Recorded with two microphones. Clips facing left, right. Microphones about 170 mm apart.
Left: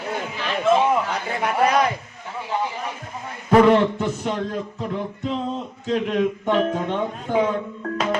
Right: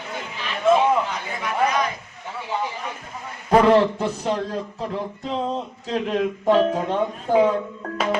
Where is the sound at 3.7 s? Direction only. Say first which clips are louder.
Right 1 dB; 35° right (ahead or behind).